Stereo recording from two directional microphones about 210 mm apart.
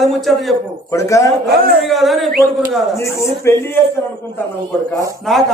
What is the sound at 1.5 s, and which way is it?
Speech, 45° right (ahead or behind).